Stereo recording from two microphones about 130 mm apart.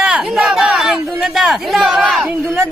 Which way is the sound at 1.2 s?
5° right (ahead or behind).